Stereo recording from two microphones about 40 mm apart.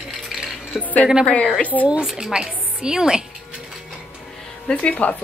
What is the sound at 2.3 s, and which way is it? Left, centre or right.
Speech, centre.